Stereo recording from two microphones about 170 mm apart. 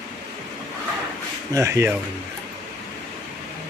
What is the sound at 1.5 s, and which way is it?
Speech, 15° right (ahead or behind).